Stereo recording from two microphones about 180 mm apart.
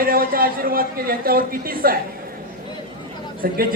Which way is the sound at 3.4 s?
55° right (ahead or behind).